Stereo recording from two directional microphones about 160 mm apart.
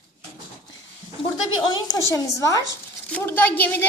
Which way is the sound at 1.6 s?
25° left (ahead or behind).